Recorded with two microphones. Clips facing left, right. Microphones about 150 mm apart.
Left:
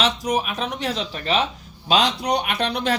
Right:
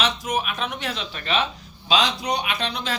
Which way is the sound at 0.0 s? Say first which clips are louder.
Left 3 dB; 35° left (ahead or behind).